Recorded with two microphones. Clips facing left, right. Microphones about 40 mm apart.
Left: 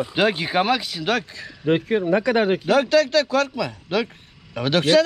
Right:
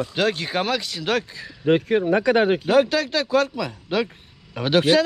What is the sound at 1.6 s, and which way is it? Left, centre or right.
Speech, left.